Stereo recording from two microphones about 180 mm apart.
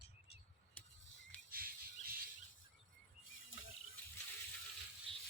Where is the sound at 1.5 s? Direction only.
55° right (ahead or behind).